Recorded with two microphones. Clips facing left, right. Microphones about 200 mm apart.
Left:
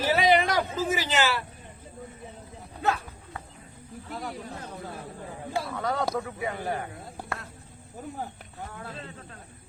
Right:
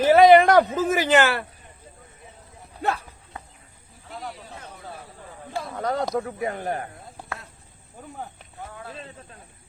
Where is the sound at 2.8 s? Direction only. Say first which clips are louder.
Right 1 dB; 30° right (ahead or behind).